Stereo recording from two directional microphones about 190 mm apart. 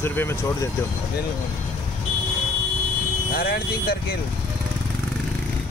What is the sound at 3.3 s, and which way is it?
Speech, 50° left (ahead or behind).